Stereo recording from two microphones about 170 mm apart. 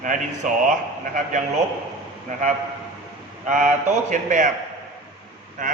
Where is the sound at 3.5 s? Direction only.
45° right (ahead or behind).